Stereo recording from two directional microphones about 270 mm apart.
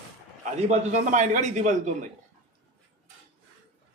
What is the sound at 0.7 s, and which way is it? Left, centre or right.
A man's voice, right.